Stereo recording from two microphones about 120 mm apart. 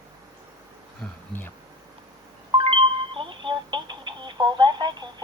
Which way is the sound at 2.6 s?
50° right (ahead or behind).